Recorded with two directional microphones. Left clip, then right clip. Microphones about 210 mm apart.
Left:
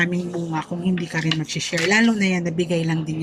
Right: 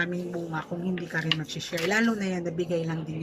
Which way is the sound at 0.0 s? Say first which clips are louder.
Left 7 dB; 10° left (ahead or behind).